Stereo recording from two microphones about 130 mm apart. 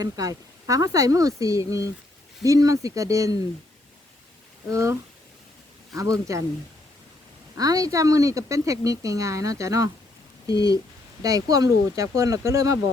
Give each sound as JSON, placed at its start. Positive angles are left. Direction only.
{"t": 0.0, "sound": "a woman's voice", "side_deg": -25}
{"t": 4.7, "sound": "a woman's voice", "side_deg": -25}
{"t": 7.5, "sound": "a woman's voice", "side_deg": -25}